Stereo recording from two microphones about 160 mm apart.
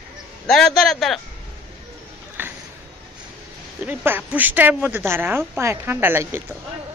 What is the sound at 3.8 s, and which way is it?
Speech, 10° right (ahead or behind).